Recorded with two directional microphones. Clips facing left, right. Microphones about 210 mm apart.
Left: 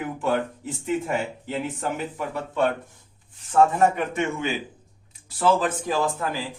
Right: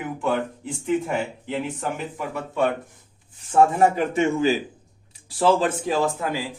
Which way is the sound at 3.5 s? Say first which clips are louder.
Right 1 dB; 30° right (ahead or behind).